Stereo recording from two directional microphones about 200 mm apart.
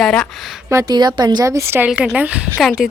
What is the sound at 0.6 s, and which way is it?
A woman's voice, 15° right (ahead or behind).